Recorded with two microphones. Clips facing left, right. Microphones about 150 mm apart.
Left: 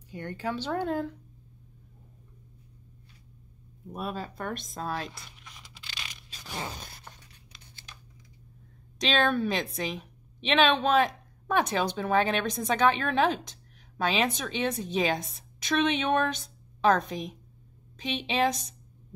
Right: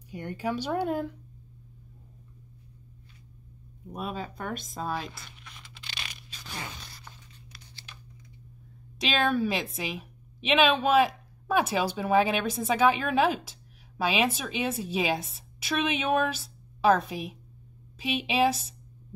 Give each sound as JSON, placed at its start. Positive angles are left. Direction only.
{"t": 0.1, "sound": "speech", "side_deg": -10}
{"t": 3.9, "sound": "speech", "side_deg": 0}
{"t": 6.7, "sound": "zipper", "side_deg": 45}
{"t": 8.9, "sound": "a woman's voice", "side_deg": 0}